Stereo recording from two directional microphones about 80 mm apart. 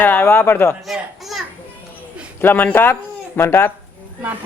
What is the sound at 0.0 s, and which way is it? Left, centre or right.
Speech, left.